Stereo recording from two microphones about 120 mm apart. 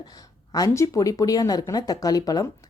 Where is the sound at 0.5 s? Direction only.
30° left (ahead or behind).